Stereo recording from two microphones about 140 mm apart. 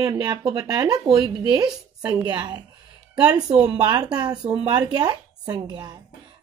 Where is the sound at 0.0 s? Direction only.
25° right (ahead or behind).